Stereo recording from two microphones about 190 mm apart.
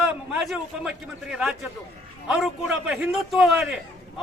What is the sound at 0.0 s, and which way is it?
A man's voice, centre (ahead or behind).